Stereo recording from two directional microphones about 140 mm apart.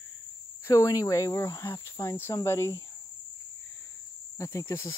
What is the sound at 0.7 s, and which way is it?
Speech, 25° left (ahead or behind).